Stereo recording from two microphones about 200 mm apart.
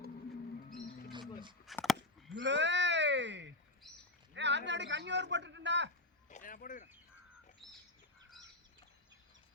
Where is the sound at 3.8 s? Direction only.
Centre (ahead or behind).